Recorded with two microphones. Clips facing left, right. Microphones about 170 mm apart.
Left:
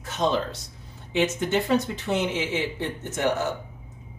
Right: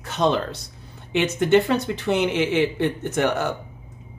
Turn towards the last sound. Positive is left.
turn(degrees=-65)  # may be behind; listen again after turning